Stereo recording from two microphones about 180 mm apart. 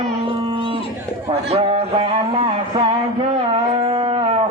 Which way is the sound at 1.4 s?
35° right (ahead or behind).